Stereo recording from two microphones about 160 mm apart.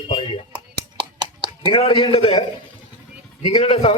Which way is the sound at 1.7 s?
35° left (ahead or behind).